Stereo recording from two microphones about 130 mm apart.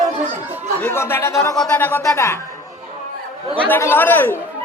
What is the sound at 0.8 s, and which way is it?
Speech, 15° left (ahead or behind).